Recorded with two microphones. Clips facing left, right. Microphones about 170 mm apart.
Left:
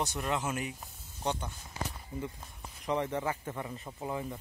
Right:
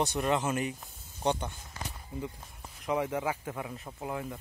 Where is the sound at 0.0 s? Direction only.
Centre (ahead or behind).